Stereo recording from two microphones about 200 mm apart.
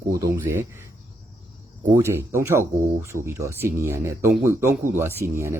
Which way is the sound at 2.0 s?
15° right (ahead or behind).